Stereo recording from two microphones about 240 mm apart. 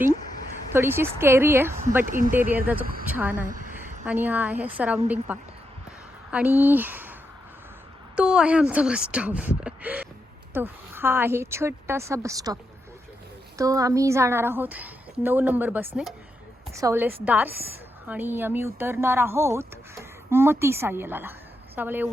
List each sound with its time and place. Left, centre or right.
0.7 s speech: centre
2.0 s speech: right
3.1 s speech: centre
3.3 s a sound: right
4.0 s speech: centre
13.6 s speech: centre